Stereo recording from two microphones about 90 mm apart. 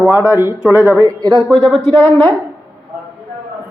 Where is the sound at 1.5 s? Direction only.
5° left (ahead or behind).